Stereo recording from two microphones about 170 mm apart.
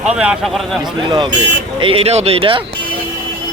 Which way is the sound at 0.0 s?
5° right (ahead or behind).